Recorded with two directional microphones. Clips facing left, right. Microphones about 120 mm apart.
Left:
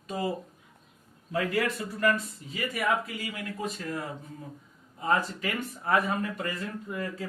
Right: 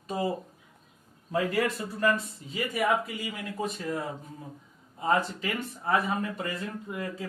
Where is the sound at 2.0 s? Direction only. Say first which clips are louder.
Even; 25° right (ahead or behind).